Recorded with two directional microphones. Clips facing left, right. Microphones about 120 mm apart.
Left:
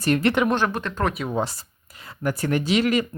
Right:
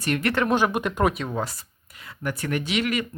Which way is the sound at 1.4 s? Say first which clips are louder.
Left 3 dB; 30° left (ahead or behind).